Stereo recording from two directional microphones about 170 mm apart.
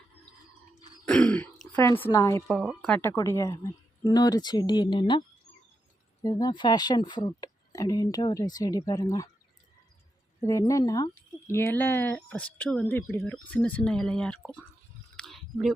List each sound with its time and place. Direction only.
1.0 s throat clearing: 5° left (ahead or behind)
2.1 s speech: 15° left (ahead or behind)
2.5 s speech: 5° left (ahead or behind); by 5.2 s 25° left (ahead or behind)
6.2 s speech: 25° left (ahead or behind)
10.4 s speech: 20° left (ahead or behind)
15.1 s a sound: 5° left (ahead or behind)